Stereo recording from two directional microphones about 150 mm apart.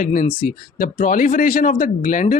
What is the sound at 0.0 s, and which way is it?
Speech, 60° left (ahead or behind).